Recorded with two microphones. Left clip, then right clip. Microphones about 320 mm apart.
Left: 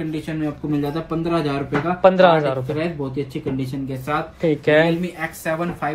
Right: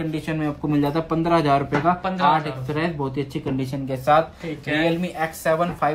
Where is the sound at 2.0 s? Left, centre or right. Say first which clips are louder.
Left 7 dB; centre.